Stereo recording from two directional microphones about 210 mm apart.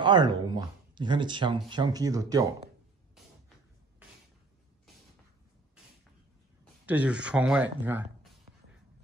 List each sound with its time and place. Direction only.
0.0 s speech: 20° right (ahead or behind)
6.9 s speech: 5° right (ahead or behind)